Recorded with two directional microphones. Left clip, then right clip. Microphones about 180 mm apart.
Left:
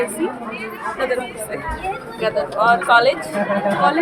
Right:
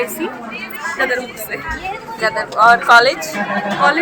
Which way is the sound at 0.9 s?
Centre (ahead or behind).